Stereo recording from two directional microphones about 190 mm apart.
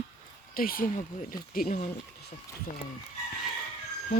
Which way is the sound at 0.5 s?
50° left (ahead or behind).